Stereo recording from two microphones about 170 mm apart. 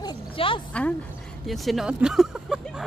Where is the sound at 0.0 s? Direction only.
25° left (ahead or behind).